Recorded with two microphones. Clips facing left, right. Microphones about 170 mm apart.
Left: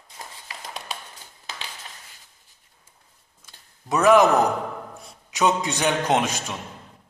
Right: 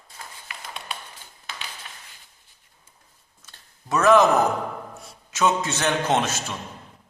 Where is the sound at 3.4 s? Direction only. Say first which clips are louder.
Left 2 dB; 15° left (ahead or behind).